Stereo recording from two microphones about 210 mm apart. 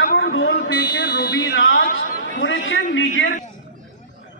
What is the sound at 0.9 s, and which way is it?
Speech, 45° left (ahead or behind).